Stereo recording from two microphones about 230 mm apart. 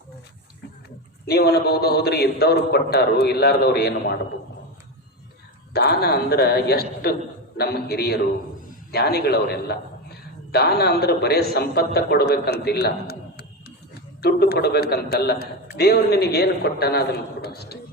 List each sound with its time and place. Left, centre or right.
1.3 s a man's voice: left
5.7 s a man's voice: left